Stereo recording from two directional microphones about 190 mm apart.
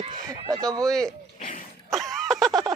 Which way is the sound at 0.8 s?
Centre (ahead or behind).